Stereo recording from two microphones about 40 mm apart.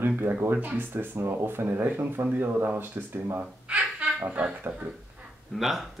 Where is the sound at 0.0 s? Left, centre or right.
Right.